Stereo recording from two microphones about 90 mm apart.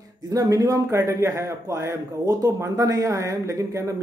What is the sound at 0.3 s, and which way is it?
Speech, 40° right (ahead or behind).